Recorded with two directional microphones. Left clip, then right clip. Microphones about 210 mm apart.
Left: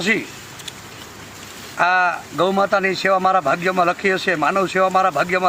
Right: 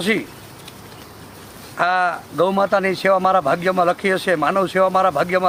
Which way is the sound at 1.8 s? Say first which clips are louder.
Left 1 dB; 25° right (ahead or behind).